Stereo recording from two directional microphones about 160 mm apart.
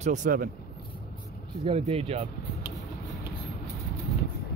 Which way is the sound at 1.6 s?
40° right (ahead or behind).